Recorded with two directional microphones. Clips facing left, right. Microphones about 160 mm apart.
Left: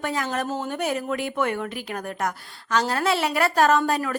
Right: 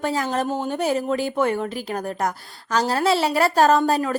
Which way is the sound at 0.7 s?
30° right (ahead or behind).